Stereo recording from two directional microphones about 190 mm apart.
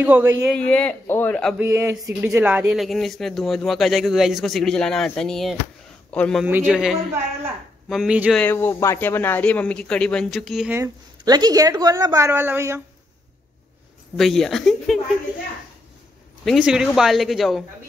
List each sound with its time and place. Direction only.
0.0 s a woman's voice: 10° right (ahead or behind)
0.5 s a man's voice: 5° left (ahead or behind)
1.6 s speech: 15° right (ahead or behind); by 6.4 s 5° left (ahead or behind)
6.4 s speech: 10° right (ahead or behind)
8.4 s a man's voice: 10° left (ahead or behind)
10.7 s a woman's voice: 20° right (ahead or behind)
14.1 s speech: centre (ahead or behind)
16.4 s speech: 5° right (ahead or behind)